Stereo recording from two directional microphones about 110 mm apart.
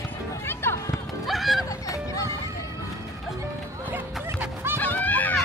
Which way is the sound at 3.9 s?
20° right (ahead or behind).